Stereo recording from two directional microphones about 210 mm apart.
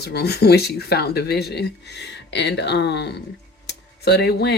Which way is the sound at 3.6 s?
50° left (ahead or behind).